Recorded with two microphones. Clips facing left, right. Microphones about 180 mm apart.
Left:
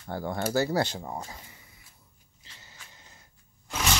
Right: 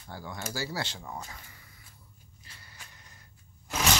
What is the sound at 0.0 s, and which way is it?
Speech, 55° left (ahead or behind).